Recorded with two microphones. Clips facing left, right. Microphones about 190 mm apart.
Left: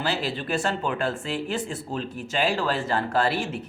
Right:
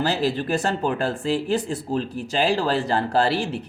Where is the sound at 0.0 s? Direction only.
40° right (ahead or behind).